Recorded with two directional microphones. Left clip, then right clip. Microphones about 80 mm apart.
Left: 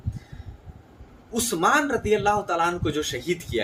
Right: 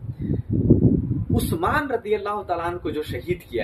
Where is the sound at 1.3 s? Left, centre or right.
Left.